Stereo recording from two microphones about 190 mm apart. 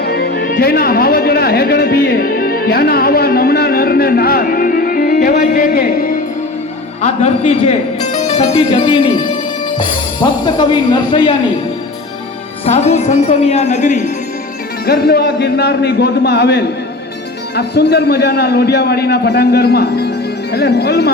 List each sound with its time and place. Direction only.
0.0 s speech: 55° left (ahead or behind)
7.0 s a woman's voice: 35° left (ahead or behind)
12.6 s a woman's voice: 35° left (ahead or behind)
14.8 s a man's voice: 55° left (ahead or behind)